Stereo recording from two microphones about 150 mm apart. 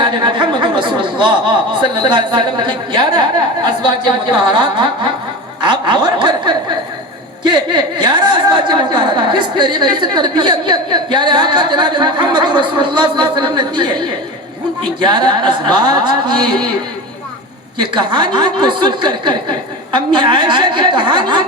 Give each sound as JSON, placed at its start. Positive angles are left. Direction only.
{"t": 0.0, "sound": "a woman's voice", "side_deg": -30}
{"t": 17.7, "sound": "a woman's voice", "side_deg": -30}